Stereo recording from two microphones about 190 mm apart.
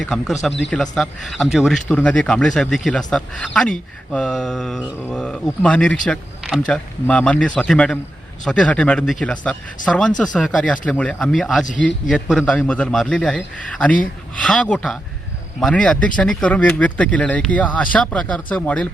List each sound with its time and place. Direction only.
0.0 s speech: centre (ahead or behind)